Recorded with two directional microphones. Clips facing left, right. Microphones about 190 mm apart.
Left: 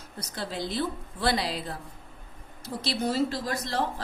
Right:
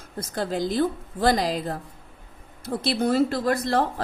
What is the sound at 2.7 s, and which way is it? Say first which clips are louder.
Speech: right 6 dB; 55° right (ahead or behind).